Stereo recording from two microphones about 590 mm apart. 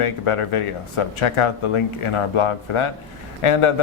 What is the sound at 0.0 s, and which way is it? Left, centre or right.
Speech, left.